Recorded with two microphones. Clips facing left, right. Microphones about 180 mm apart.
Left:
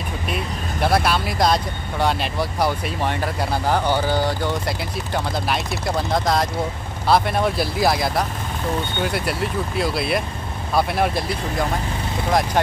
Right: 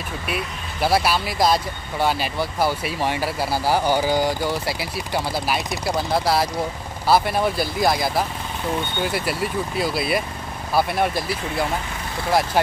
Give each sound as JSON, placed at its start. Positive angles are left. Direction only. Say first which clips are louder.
{"t": 0.3, "sound": "speech", "louder": "left 2 dB", "side_deg": -5}